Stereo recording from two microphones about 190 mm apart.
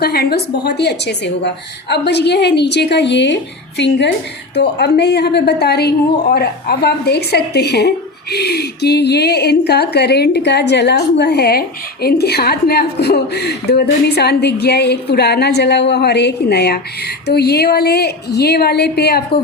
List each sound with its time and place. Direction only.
0.0 s a woman's voice: 55° left (ahead or behind)